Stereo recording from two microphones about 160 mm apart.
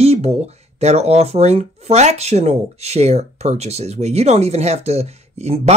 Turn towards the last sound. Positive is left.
turn(degrees=-40)  # may be behind; listen again after turning